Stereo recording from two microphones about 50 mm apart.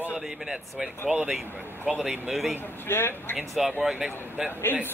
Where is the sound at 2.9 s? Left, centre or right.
Left.